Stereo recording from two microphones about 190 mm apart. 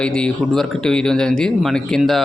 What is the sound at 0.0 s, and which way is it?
Speech, 5° left (ahead or behind).